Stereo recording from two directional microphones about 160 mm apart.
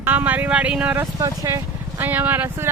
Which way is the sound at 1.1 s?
20° right (ahead or behind).